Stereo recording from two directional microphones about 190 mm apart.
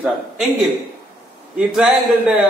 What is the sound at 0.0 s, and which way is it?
Speech, centre (ahead or behind).